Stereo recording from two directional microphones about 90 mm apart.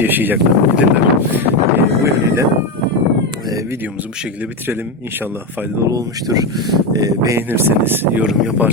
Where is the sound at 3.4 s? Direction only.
45° right (ahead or behind).